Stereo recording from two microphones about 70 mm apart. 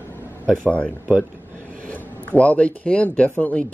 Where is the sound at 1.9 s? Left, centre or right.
Left.